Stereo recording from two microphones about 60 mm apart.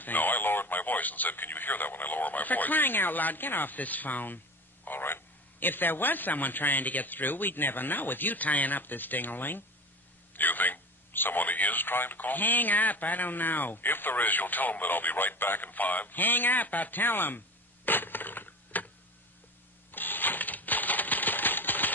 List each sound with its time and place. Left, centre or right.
0.0 s speech: left
17.8 s a sound: left
19.9 s typewriter: left